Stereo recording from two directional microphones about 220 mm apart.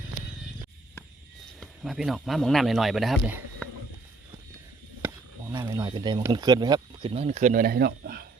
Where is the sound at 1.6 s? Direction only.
Centre (ahead or behind).